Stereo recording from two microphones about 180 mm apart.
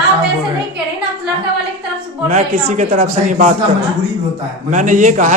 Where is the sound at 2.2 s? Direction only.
35° right (ahead or behind).